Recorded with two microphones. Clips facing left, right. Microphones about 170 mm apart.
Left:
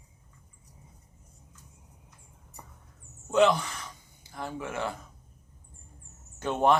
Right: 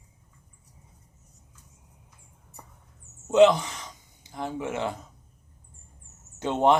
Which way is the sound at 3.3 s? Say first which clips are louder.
Right 5 dB; 20° right (ahead or behind).